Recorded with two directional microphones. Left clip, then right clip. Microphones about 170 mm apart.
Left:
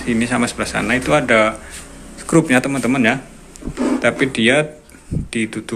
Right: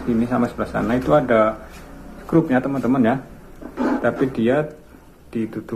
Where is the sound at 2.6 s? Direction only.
15° left (ahead or behind).